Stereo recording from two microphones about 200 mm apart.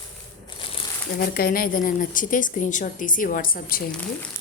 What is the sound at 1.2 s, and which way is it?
A woman's voice, 50° left (ahead or behind).